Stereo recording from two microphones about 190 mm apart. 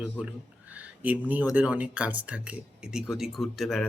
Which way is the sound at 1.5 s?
5° right (ahead or behind).